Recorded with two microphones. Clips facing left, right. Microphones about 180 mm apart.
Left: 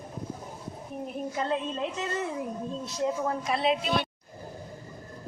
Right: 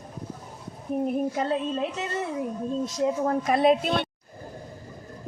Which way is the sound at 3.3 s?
50° right (ahead or behind).